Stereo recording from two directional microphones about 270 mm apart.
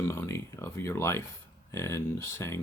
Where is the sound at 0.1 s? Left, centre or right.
Centre.